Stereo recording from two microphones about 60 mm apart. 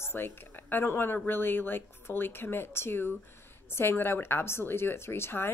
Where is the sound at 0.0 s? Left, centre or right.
Left.